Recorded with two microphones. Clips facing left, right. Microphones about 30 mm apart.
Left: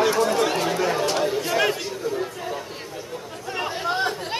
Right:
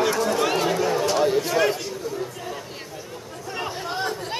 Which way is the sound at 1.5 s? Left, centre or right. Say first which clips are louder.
Even; centre.